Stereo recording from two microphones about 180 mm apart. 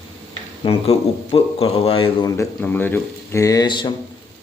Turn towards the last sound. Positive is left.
turn(degrees=25)  # may be behind; listen again after turning